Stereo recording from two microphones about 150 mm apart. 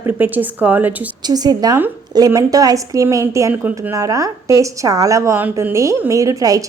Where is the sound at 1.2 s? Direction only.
25° right (ahead or behind).